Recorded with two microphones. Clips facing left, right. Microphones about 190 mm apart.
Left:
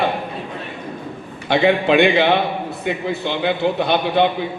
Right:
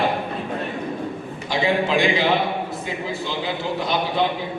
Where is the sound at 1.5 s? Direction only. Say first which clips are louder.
Left 6 dB; 65° left (ahead or behind).